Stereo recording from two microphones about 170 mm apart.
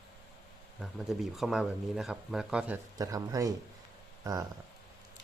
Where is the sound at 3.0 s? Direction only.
20° right (ahead or behind).